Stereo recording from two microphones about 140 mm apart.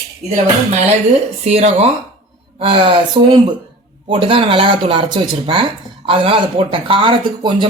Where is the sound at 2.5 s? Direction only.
40° right (ahead or behind).